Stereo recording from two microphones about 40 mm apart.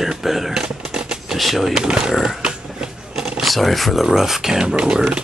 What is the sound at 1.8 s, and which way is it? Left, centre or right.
Speech, centre.